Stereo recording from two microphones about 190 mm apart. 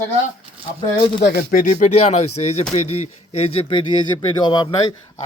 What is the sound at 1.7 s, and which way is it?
Speech, 35° left (ahead or behind).